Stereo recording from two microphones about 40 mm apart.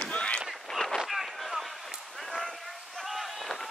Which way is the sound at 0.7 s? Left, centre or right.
Centre.